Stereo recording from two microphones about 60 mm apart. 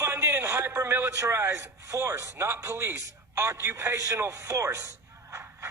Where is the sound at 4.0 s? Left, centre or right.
Right.